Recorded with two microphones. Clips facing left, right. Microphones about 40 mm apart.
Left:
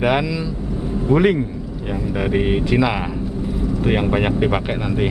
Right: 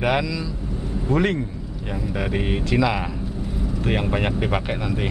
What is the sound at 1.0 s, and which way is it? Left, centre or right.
A man's voice, centre.